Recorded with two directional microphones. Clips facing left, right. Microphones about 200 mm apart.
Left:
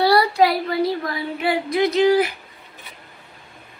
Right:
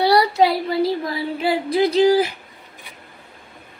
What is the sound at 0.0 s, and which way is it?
Speech, 20° right (ahead or behind).